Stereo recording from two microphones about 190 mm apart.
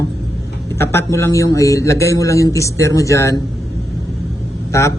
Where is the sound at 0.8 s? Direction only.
15° left (ahead or behind).